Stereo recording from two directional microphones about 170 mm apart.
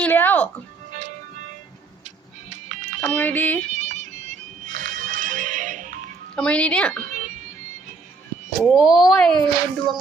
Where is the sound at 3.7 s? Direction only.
45° right (ahead or behind).